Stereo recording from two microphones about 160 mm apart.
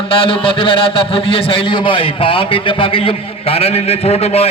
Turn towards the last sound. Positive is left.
turn(degrees=40)  # may be behind; listen again after turning